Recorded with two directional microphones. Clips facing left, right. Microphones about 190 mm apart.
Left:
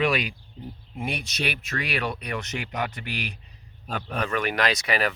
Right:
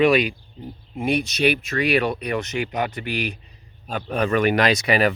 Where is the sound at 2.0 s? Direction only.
20° right (ahead or behind).